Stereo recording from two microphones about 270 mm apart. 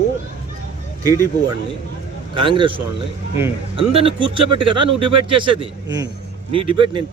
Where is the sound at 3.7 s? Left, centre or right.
Centre.